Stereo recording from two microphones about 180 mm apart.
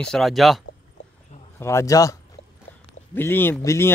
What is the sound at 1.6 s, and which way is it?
Speech, 15° left (ahead or behind).